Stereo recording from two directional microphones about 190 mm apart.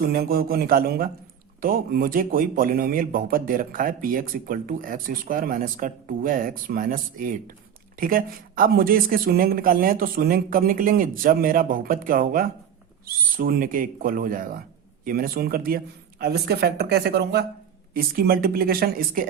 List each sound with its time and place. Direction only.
0.0 s a man's voice: 55° right (ahead or behind)